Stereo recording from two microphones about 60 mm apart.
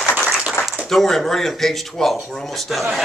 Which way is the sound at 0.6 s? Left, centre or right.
Left.